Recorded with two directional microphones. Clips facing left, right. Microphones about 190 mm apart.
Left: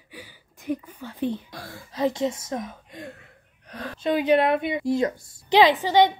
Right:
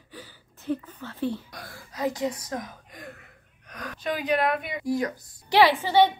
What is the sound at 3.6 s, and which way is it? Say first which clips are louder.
A woman's voice: left 5 dB; 30° left (ahead or behind).